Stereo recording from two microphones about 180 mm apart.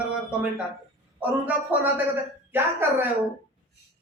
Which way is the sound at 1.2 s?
10° right (ahead or behind).